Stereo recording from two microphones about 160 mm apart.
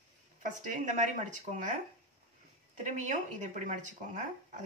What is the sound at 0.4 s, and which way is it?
Speech, 50° right (ahead or behind).